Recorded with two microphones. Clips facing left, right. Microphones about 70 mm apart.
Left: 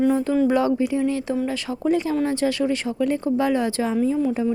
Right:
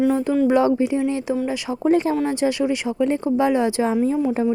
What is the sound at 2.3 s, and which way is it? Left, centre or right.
Speech, centre.